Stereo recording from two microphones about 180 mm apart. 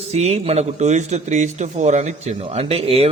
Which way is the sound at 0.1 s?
35° right (ahead or behind).